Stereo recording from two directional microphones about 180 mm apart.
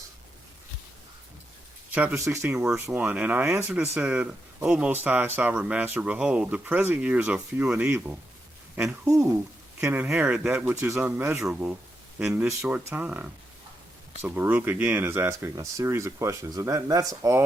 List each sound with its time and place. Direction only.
1.9 s speech: 10° right (ahead or behind)